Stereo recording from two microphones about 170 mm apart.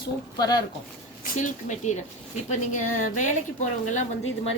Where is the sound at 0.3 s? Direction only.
25° left (ahead or behind).